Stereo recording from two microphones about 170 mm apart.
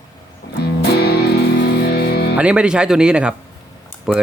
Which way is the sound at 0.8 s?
70° left (ahead or behind).